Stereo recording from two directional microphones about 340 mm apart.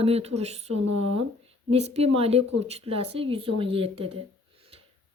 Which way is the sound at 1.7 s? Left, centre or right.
Centre.